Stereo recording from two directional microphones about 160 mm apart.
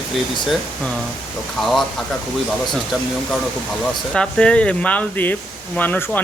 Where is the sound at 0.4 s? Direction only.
Centre (ahead or behind).